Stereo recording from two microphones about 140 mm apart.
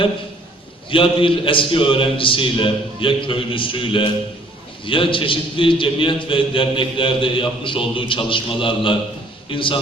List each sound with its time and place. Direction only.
0.9 s a man's voice: 40° left (ahead or behind)